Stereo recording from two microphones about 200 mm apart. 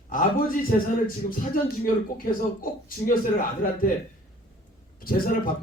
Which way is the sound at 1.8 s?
45° left (ahead or behind).